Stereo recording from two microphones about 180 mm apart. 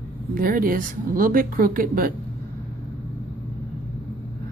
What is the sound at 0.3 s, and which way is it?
Speech, 55° right (ahead or behind).